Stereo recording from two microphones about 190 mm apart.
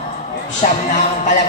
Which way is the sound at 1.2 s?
40° left (ahead or behind).